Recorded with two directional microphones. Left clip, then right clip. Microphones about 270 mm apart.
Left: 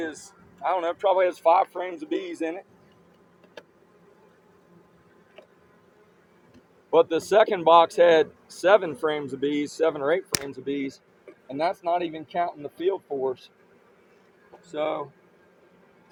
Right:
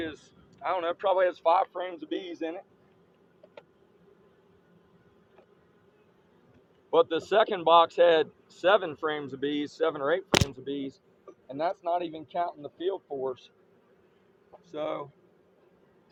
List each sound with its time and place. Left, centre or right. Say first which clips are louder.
0.6 s speech: left 4 dB; left
6.9 s speech: left 4 dB; left
11.4 s speech: left 4 dB; left
14.7 s speech: left 6 dB; left